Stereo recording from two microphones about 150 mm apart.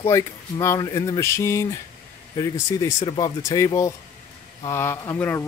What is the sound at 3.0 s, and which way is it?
Speech, 35° left (ahead or behind).